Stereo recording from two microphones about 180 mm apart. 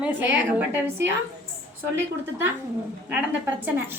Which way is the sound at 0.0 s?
10° right (ahead or behind).